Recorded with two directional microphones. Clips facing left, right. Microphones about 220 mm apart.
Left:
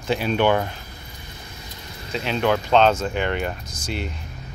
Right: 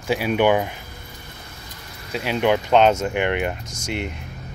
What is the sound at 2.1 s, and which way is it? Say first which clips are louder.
Speech: right 2 dB; 10° right (ahead or behind).